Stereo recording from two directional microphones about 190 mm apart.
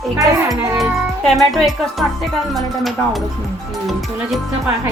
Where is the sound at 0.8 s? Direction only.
Centre (ahead or behind).